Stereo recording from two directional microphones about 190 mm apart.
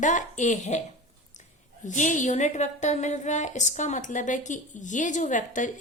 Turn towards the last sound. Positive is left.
turn(degrees=40)  # may be behind; listen again after turning